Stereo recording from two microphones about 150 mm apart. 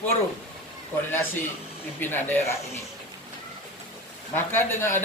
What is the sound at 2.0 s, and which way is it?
Speech, 15° left (ahead or behind).